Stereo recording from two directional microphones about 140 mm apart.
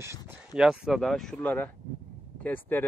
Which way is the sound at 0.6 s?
5° right (ahead or behind).